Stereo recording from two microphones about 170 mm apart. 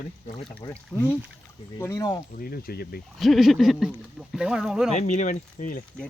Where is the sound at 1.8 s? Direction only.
20° left (ahead or behind).